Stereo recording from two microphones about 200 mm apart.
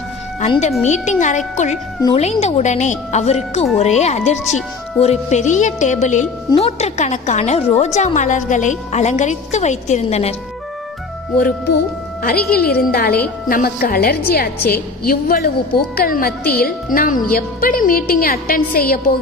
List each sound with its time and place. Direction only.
0.3 s a woman's voice: 35° left (ahead or behind)
12.2 s a woman's voice: 50° left (ahead or behind)